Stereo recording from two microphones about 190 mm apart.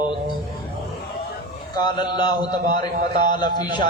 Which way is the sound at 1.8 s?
25° left (ahead or behind).